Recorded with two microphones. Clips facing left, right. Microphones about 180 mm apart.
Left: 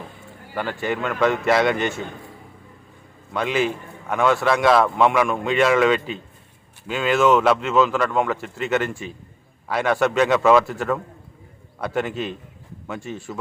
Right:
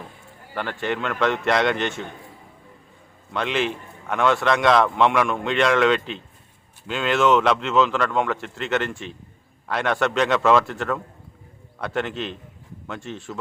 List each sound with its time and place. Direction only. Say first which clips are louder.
0.5 s a man's voice: left 1 dB; 5° left (ahead or behind)
3.3 s a man's voice: left 2 dB; 5° left (ahead or behind)